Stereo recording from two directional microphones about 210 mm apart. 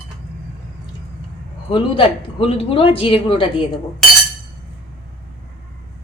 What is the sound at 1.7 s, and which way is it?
Speech, 25° left (ahead or behind).